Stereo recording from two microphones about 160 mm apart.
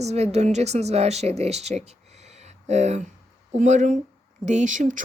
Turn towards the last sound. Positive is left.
turn(degrees=-55)  # may be behind; listen again after turning